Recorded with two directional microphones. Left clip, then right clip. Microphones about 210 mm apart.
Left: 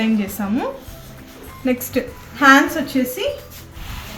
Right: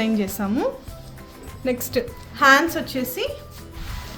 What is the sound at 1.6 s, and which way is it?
A woman's voice, 60° right (ahead or behind).